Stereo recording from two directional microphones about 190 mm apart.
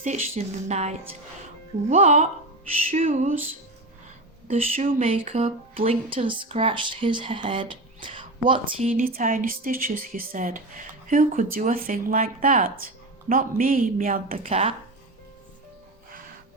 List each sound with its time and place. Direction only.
0.0 s speech: 40° right (ahead or behind)
4.4 s speech: 35° right (ahead or behind)
8.8 s speech: 45° right (ahead or behind)